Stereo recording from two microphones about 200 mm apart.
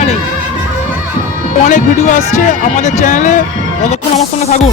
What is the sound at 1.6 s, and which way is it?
Speech, 40° left (ahead or behind).